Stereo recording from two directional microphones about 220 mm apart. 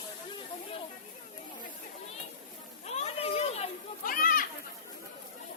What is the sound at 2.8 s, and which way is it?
Children playing, 30° left (ahead or behind).